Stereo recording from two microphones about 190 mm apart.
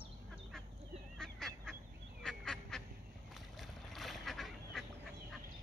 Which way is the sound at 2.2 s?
Centre (ahead or behind).